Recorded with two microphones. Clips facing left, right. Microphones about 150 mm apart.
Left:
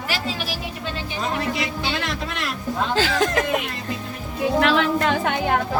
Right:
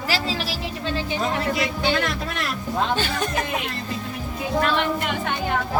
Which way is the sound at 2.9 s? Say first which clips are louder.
Left 4 dB; 90° left.